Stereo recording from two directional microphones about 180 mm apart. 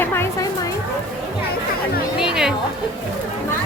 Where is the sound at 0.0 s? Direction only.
15° left (ahead or behind).